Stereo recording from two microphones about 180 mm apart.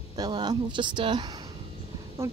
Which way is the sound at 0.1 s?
25° right (ahead or behind).